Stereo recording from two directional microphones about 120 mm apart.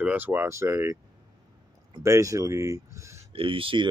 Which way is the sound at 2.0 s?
25° right (ahead or behind).